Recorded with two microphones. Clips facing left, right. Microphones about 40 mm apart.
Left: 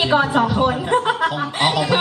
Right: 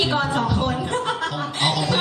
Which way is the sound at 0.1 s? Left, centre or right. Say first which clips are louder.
Left 5 dB; centre.